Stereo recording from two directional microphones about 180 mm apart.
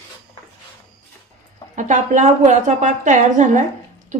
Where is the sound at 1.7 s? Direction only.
40° right (ahead or behind).